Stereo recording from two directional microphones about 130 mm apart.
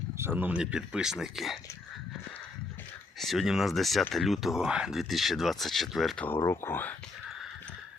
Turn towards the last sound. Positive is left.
turn(degrees=15)  # may be behind; listen again after turning